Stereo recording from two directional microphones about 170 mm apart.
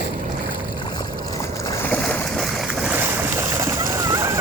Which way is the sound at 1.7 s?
10° left (ahead or behind).